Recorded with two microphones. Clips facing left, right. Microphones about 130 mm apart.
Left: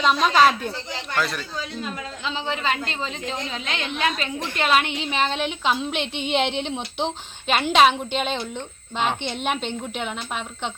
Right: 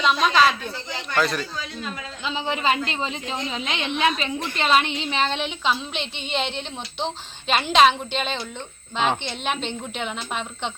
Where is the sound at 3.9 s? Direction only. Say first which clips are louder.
Right 3 dB; centre (ahead or behind).